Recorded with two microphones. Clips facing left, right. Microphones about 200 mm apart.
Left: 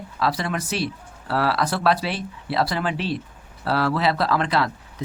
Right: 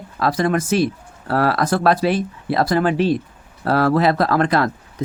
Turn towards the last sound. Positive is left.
turn(degrees=-50)  # may be behind; listen again after turning